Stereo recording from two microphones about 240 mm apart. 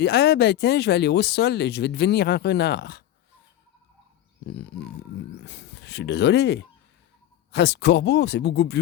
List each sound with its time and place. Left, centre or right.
0.0 s speech: left
5.5 s speech: left